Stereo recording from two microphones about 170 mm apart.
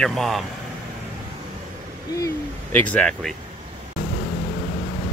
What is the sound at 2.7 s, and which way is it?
Speech, 10° left (ahead or behind).